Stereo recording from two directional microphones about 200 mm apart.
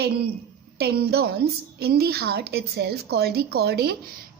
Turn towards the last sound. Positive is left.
turn(degrees=-55)  # may be behind; listen again after turning